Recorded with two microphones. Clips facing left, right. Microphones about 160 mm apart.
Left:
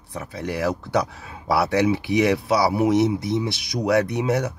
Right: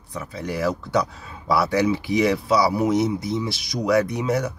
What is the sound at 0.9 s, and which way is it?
Speech, 60° left (ahead or behind).